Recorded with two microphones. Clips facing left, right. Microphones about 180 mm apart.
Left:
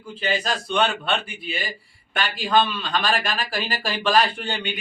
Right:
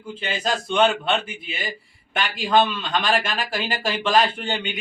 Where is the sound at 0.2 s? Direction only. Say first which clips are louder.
Left 1 dB; 20° right (ahead or behind).